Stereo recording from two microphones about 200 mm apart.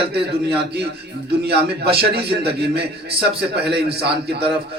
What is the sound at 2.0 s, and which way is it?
A man's voice, 55° right (ahead or behind).